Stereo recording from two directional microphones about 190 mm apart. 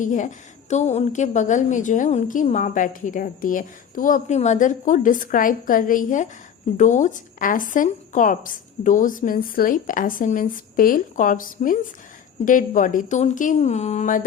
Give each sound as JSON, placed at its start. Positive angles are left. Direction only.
{"t": 0.0, "sound": "a woman's voice", "side_deg": 40}